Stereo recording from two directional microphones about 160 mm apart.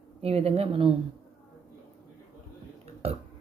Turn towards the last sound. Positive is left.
turn(degrees=-40)  # may be behind; listen again after turning